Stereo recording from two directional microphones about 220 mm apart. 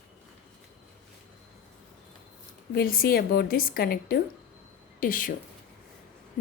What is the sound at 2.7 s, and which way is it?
A woman's voice, 40° left (ahead or behind).